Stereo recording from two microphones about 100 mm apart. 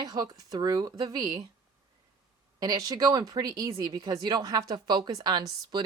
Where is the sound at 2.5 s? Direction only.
40° right (ahead or behind).